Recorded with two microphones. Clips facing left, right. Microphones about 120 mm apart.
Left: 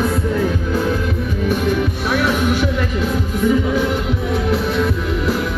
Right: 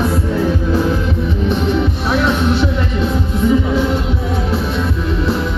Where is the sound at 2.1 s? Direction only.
25° right (ahead or behind).